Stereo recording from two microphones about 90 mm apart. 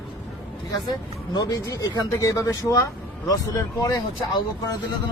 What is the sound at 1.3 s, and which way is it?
Speech, 40° left (ahead or behind).